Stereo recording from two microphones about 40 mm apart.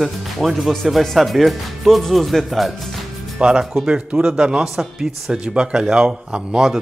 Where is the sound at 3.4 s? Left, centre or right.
Right.